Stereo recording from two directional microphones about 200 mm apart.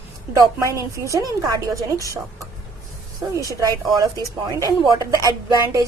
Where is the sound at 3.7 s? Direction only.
15° right (ahead or behind).